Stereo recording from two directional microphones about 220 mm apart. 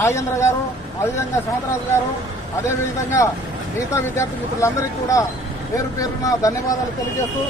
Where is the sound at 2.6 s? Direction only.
15° left (ahead or behind).